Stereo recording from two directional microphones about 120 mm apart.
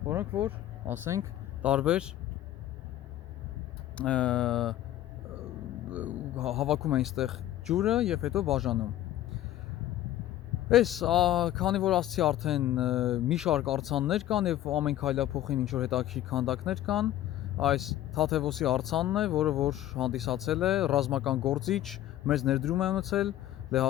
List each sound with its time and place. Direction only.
0.0 s speech: 20° right (ahead or behind)
1.6 s speech: 10° right (ahead or behind)
3.9 s speech: 10° left (ahead or behind)
5.3 s a sound: 5° right (ahead or behind)
6.9 s speech: centre (ahead or behind)
10.7 s speech: centre (ahead or behind)